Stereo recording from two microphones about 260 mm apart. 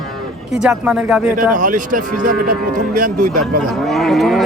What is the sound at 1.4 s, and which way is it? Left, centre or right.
Speech, right.